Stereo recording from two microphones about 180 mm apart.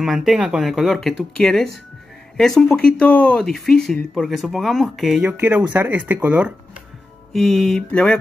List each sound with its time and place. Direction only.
0.0 s speech: centre (ahead or behind)